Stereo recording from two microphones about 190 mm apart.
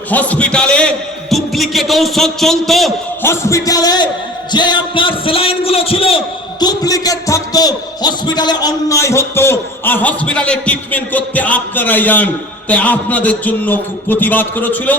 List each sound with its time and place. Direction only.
0.1 s a man's voice: 10° left (ahead or behind)
3.2 s a man's voice: 15° left (ahead or behind)